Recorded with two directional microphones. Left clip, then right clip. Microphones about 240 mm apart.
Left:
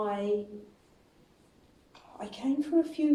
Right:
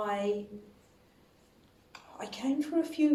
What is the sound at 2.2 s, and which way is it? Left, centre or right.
Speech, right.